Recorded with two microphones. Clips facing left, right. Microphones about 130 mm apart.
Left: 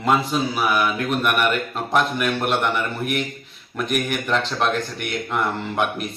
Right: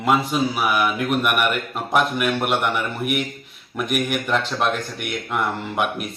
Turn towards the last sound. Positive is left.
turn(degrees=-5)  # may be behind; listen again after turning